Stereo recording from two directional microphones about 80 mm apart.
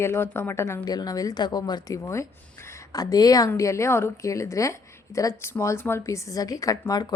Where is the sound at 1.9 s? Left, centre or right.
Left.